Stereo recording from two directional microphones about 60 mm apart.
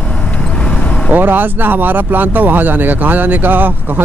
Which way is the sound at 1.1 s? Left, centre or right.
Right.